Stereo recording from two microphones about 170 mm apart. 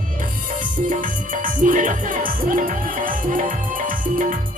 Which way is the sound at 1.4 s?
50° right (ahead or behind).